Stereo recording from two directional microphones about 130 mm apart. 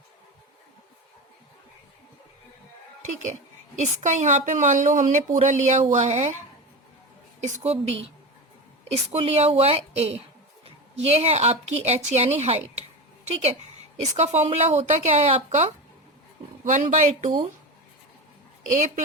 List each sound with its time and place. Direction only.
3.0 s a sound: 70° right (ahead or behind)
3.8 s a woman's voice: 65° right (ahead or behind)
7.4 s a woman's voice: 55° right (ahead or behind)
9.1 s a woman's voice: 50° right (ahead or behind)
16.6 s a woman's voice: 75° right (ahead or behind)